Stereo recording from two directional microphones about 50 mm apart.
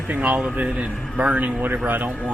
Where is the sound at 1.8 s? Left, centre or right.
Right.